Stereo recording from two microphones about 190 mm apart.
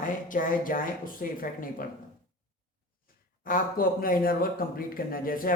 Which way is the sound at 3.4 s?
45° left (ahead or behind).